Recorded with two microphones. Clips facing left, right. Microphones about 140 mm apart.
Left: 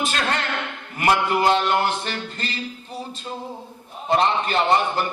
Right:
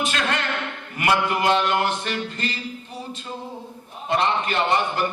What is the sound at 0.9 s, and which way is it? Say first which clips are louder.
Speech: left 2 dB; 35° left (ahead or behind).